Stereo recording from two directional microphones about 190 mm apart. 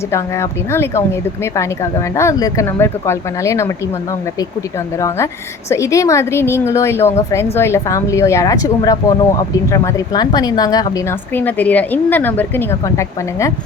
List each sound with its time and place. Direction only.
0.1 s a woman's voice: 15° left (ahead or behind)
4.9 s a woman's voice: 15° left (ahead or behind)
11.3 s a woman's voice: 10° left (ahead or behind)